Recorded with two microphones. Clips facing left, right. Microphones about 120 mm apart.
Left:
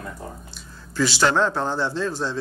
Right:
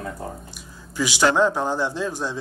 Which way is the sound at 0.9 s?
15° right (ahead or behind).